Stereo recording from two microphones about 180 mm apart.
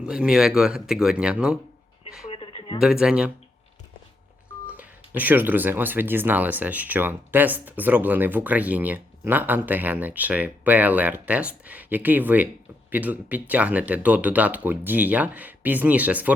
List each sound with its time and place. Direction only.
0.0 s speech: 5° right (ahead or behind)
2.3 s a sound: 30° left (ahead or behind)
2.8 s speech: 5° right (ahead or behind)
4.7 s speech: 10° right (ahead or behind)